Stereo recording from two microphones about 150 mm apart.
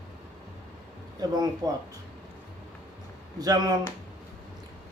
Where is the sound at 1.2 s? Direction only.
25° right (ahead or behind).